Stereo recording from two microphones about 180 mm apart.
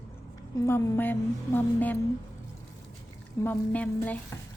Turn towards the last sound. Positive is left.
turn(degrees=10)  # may be behind; listen again after turning